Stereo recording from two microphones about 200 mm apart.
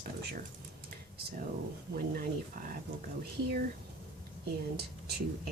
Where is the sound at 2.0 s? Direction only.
45° right (ahead or behind).